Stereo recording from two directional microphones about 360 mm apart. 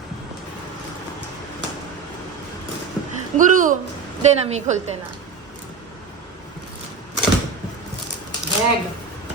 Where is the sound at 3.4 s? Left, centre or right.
Right.